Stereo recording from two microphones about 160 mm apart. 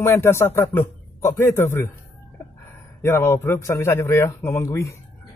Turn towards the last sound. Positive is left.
turn(degrees=20)  # may be behind; listen again after turning